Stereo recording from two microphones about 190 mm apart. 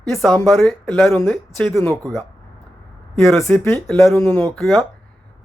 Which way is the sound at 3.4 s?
10° left (ahead or behind).